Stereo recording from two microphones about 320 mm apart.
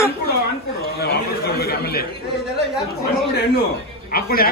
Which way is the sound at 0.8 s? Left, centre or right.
Left.